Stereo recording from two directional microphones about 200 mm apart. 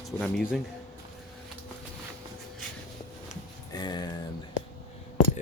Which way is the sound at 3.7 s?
20° left (ahead or behind).